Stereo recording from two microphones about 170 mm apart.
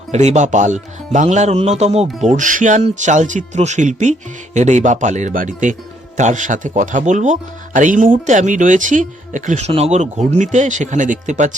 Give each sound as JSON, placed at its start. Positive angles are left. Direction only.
{"t": 0.1, "sound": "speech", "side_deg": -45}
{"t": 2.3, "sound": "speech", "side_deg": -50}